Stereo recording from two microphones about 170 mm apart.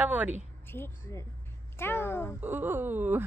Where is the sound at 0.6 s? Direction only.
15° left (ahead or behind).